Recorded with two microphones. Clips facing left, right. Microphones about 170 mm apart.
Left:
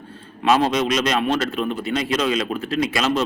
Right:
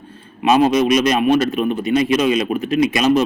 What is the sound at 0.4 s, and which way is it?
A man's voice, 15° right (ahead or behind).